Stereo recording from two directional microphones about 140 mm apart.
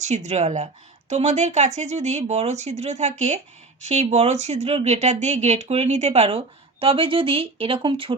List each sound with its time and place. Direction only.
0.0 s speech: 55° right (ahead or behind); by 8.1 s 40° right (ahead or behind)